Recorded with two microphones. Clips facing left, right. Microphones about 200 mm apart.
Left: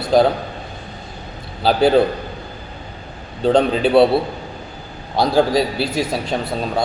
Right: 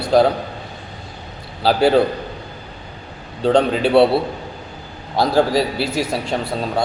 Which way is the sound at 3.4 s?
5° left (ahead or behind).